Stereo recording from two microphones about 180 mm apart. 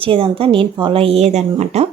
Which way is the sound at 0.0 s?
30° right (ahead or behind).